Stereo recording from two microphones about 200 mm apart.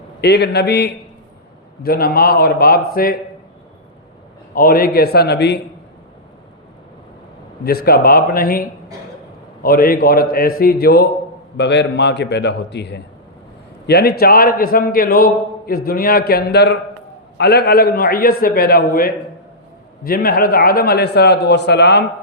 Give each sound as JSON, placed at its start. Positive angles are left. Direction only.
{"t": 0.2, "sound": "a man's voice", "side_deg": 55}
{"t": 4.5, "sound": "a man's voice", "side_deg": 45}
{"t": 7.9, "sound": "a man's voice", "side_deg": 50}